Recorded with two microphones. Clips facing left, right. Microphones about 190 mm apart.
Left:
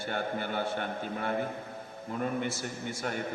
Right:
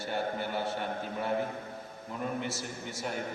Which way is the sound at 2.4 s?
55° left (ahead or behind).